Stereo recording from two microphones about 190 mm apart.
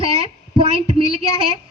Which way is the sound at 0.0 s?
30° right (ahead or behind).